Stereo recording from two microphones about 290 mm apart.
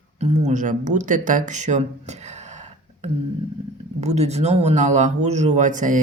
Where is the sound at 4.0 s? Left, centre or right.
Right.